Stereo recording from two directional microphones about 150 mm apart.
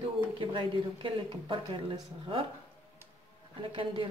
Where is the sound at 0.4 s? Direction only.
35° right (ahead or behind).